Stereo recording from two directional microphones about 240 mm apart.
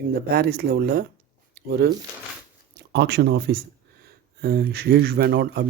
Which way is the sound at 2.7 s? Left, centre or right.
Right.